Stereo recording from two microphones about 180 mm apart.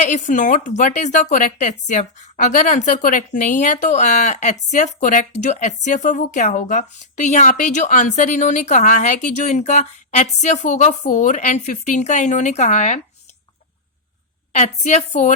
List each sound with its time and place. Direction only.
0.0 s a woman's voice: 40° left (ahead or behind)
14.5 s speech: 40° left (ahead or behind)